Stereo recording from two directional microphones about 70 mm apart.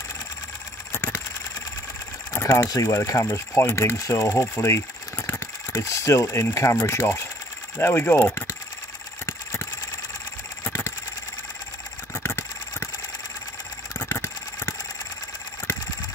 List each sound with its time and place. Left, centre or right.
2.4 s speech: left
9.2 s vehicle: left
12.1 s vehicle: left
14.0 s vehicle: left